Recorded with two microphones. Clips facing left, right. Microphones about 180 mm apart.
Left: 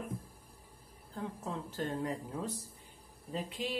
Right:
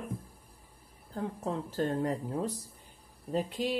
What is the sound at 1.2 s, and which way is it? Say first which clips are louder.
Speech: right 5 dB; 40° right (ahead or behind).